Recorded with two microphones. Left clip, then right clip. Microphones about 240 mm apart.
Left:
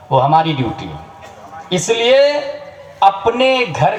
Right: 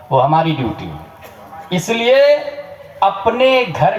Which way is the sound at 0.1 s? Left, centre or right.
Left.